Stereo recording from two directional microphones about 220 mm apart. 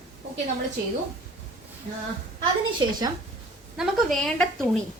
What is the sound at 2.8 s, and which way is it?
Speech, 20° right (ahead or behind).